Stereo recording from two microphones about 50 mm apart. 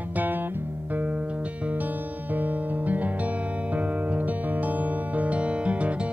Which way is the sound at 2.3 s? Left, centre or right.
Right.